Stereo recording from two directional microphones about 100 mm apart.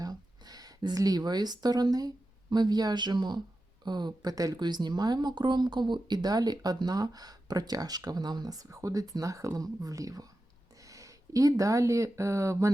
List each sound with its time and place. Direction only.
0.0 s speech: 40° right (ahead or behind)